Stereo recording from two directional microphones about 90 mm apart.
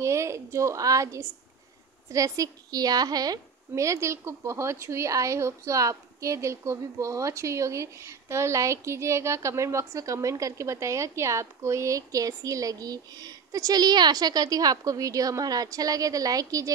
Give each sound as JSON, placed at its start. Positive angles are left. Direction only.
{"t": 0.0, "sound": "a woman's voice", "side_deg": -35}